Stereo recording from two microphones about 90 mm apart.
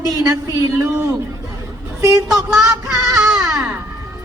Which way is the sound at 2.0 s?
35° right (ahead or behind).